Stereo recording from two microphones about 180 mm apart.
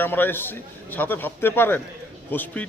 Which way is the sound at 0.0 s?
10° left (ahead or behind).